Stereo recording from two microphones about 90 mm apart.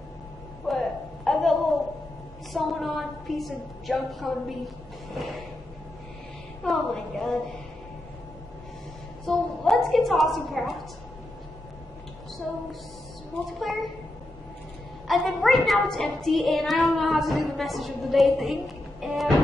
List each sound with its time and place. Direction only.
0.7 s a sound: centre (ahead or behind)
2.5 s child singing: centre (ahead or behind)
6.6 s a woman's voice: 5° left (ahead or behind)
9.2 s a woman's voice: centre (ahead or behind)
13.5 s child singing: centre (ahead or behind)
15.0 s child singing: centre (ahead or behind)